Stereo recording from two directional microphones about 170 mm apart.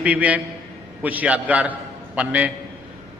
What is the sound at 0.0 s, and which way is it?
A man's voice, 10° right (ahead or behind).